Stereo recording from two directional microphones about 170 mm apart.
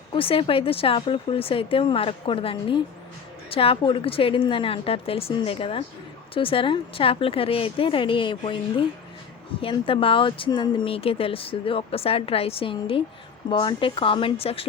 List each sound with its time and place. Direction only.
0.1 s speech: 30° left (ahead or behind)